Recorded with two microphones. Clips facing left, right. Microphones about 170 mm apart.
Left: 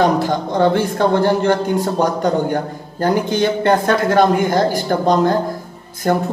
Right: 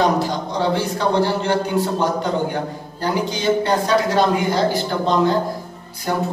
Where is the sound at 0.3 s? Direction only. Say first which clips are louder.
Left 5 dB; 50° left (ahead or behind).